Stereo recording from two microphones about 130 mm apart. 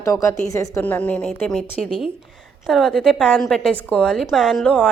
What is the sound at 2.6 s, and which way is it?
A woman's voice, 5° left (ahead or behind).